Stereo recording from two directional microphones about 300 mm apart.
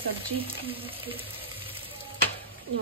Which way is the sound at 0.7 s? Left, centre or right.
Centre.